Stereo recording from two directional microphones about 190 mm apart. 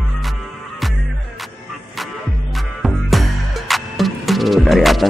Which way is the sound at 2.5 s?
Centre (ahead or behind).